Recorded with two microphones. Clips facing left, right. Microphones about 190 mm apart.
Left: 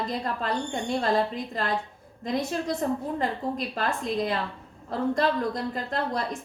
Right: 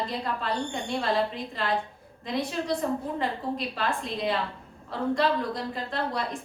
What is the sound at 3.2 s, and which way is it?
A woman's voice, 45° left (ahead or behind).